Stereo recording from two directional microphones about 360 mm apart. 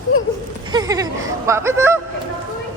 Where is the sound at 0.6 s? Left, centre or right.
Centre.